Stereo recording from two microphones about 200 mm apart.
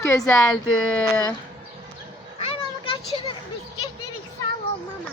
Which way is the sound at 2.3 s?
30° left (ahead or behind).